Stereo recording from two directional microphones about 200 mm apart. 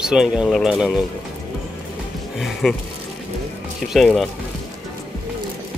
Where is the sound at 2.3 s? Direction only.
Centre (ahead or behind).